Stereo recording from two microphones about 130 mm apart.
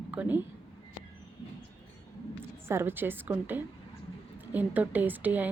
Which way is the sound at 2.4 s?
20° right (ahead or behind).